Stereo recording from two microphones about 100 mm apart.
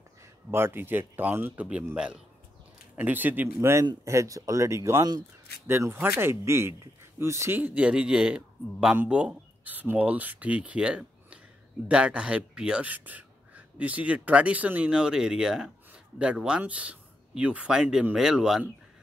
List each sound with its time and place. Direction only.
0.5 s speech: 25° right (ahead or behind)
4.0 s speech: 30° right (ahead or behind); by 18.6 s 5° right (ahead or behind)